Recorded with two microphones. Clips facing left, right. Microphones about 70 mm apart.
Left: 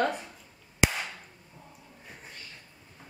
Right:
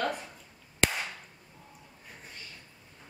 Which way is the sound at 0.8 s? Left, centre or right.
Centre.